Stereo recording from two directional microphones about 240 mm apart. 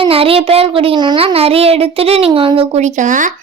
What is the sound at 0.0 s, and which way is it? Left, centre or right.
A child's voice, right.